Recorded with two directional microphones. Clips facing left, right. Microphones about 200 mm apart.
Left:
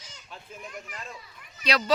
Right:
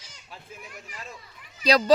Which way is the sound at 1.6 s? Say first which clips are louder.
Right 6 dB; 35° right (ahead or behind).